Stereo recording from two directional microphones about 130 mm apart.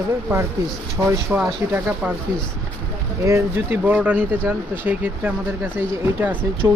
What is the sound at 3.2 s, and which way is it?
Speech, 20° right (ahead or behind).